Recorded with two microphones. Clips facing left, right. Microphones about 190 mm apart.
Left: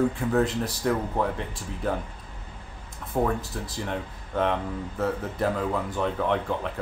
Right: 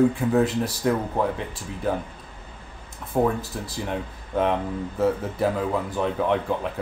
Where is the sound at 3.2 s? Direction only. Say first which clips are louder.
Right 3 dB; 5° right (ahead or behind).